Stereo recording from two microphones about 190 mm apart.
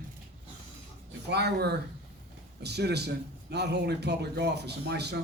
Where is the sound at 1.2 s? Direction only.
60° right (ahead or behind).